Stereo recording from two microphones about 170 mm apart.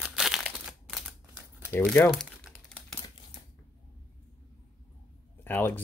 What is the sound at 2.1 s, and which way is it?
Crumpling, centre (ahead or behind).